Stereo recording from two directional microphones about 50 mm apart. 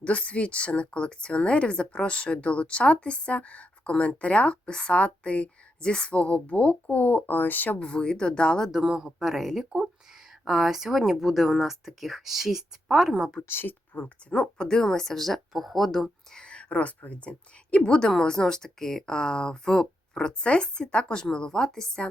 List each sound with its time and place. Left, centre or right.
0.0 s speech: left
7.8 s speech: centre
8.7 s speech: centre
13.5 s speech: left
13.9 s a woman's voice: left
14.3 s speech: centre
16.3 s a woman's voice: centre